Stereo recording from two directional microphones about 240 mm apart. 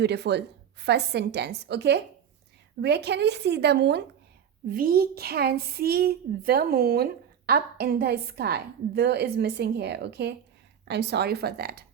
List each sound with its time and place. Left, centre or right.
0.0 s a woman's voice: right